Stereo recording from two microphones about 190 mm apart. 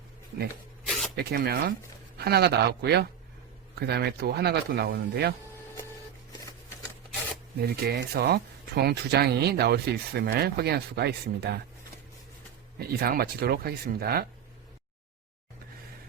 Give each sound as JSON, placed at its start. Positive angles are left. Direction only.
{"t": 0.9, "sound": "a sound", "side_deg": 0}
{"t": 1.1, "sound": "speech", "side_deg": -55}
{"t": 7.6, "sound": "speech", "side_deg": -55}
{"t": 12.8, "sound": "speech", "side_deg": -55}